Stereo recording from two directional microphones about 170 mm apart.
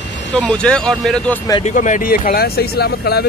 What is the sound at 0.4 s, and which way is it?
Speech, 5° left (ahead or behind).